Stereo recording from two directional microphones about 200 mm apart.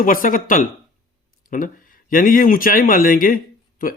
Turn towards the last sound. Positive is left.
turn(degrees=45)  # may be behind; listen again after turning